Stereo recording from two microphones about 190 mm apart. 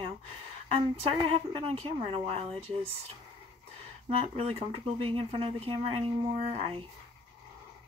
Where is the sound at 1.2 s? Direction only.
30° right (ahead or behind).